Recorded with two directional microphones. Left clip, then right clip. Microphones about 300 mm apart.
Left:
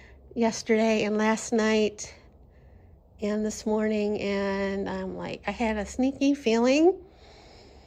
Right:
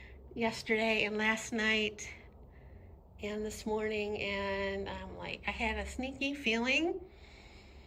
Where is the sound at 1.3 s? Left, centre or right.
Centre.